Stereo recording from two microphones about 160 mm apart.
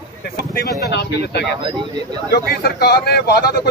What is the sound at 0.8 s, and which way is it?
Speech, 90° left.